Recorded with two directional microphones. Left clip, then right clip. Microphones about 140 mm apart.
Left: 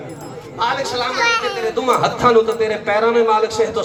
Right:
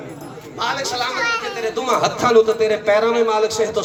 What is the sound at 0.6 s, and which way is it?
Speech, 50° right (ahead or behind).